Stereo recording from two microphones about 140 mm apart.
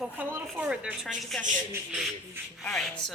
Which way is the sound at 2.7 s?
5° left (ahead or behind).